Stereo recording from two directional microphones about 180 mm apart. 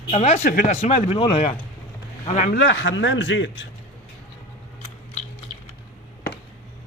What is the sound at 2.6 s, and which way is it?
A man's voice, 90° left.